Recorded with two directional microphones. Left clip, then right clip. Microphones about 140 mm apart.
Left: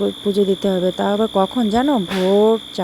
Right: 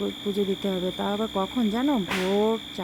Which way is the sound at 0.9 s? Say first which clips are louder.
Left 10 dB; 40° left (ahead or behind).